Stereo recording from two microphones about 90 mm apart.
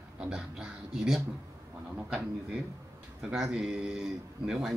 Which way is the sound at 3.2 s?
5° right (ahead or behind).